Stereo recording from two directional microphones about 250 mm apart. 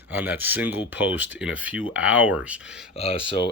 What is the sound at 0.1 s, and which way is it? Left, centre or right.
Speech, centre.